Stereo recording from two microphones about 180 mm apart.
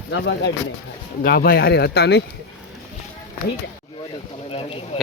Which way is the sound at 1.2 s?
55° left (ahead or behind).